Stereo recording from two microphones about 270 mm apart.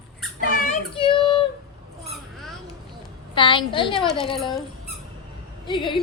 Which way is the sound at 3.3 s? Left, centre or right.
Centre.